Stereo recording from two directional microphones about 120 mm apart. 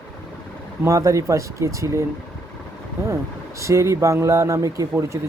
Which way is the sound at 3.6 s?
25° right (ahead or behind).